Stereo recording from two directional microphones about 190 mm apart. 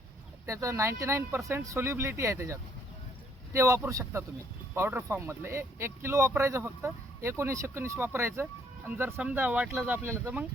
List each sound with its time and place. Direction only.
0.4 s speech: 15° right (ahead or behind)